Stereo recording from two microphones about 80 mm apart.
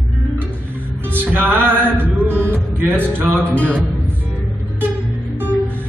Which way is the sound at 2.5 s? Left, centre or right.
Right.